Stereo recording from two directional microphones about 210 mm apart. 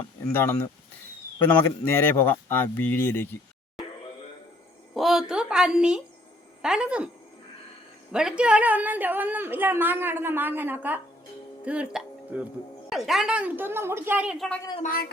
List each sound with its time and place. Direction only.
0.3 s speech: 10° left (ahead or behind)
4.9 s a sound: centre (ahead or behind)
6.6 s a woman's voice: 5° right (ahead or behind)
8.1 s a woman's voice: 5° right (ahead or behind)
14.8 s a man's voice: 40° left (ahead or behind)